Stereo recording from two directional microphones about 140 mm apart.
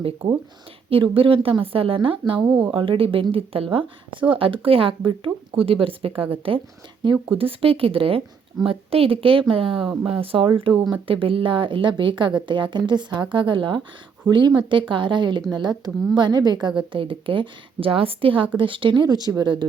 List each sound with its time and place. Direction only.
0.2 s a woman's voice: 40° right (ahead or behind)
2.4 s speech: 10° right (ahead or behind)
2.7 s a woman's voice: 40° right (ahead or behind)
9.8 s speech: 5° right (ahead or behind)
10.1 s a woman's voice: 40° right (ahead or behind)